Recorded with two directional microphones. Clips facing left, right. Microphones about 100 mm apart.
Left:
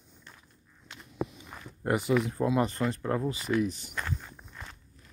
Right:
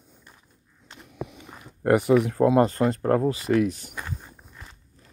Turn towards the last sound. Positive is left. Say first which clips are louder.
# left 1 dB
turn(degrees=-10)  # may be behind; listen again after turning